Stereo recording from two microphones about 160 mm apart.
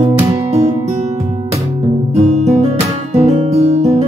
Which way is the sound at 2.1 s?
45° right (ahead or behind).